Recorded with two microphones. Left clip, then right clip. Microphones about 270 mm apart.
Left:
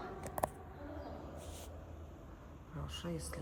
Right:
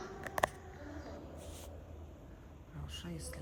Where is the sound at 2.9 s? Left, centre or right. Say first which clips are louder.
Left 2 dB; centre.